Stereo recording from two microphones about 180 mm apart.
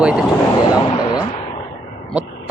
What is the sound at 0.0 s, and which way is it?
Speech, 5° right (ahead or behind).